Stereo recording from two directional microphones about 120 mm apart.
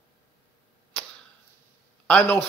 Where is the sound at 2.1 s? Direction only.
10° left (ahead or behind).